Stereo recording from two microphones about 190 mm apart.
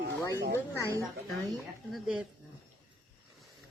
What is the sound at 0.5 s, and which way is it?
Speech, 15° left (ahead or behind).